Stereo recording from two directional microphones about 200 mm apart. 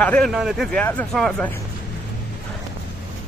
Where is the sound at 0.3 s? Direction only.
5° right (ahead or behind).